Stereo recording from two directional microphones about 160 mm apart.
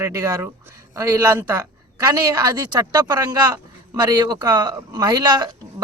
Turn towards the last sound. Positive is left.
turn(degrees=-25)  # may be behind; listen again after turning